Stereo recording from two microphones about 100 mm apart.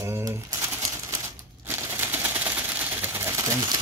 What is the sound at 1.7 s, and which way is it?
Typewriter, 25° right (ahead or behind).